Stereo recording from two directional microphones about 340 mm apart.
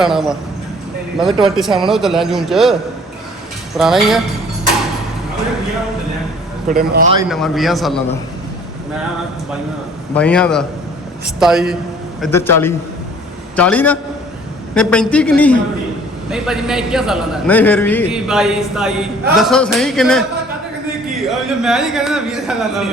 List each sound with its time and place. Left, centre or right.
0.0 s a man's voice: centre
1.5 s a man's voice: centre
3.8 s a man's voice: centre
6.7 s a man's voice: right
7.2 s a man's voice: centre
10.2 s a man's voice: centre
21.2 s a man's voice: centre